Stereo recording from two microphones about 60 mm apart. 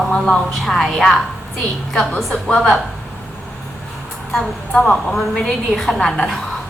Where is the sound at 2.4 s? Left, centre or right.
Centre.